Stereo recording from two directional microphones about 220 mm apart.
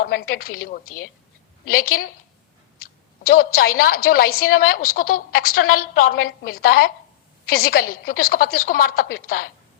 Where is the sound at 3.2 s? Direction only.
40° left (ahead or behind).